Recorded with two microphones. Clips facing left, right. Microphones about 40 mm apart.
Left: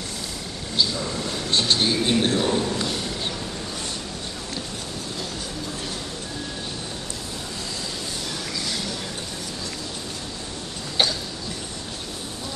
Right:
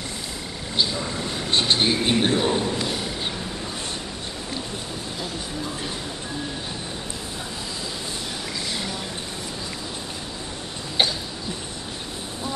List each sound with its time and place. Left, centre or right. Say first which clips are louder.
0.7 s speech: even; centre